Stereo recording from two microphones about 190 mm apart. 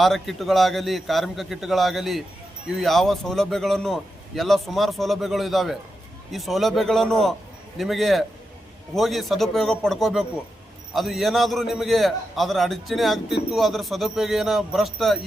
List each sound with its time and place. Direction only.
0.0 s a man's voice: centre (ahead or behind)